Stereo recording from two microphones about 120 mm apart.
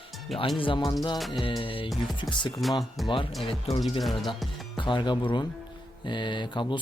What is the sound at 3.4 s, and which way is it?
Speech, 50° left (ahead or behind).